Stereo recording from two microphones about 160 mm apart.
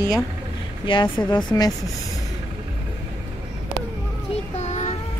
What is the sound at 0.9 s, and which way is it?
Speech, 30° left (ahead or behind).